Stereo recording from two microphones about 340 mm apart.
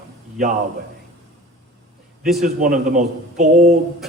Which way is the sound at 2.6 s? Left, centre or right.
Right.